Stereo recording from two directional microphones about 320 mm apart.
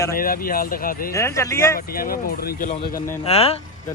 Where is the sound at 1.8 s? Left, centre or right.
Left.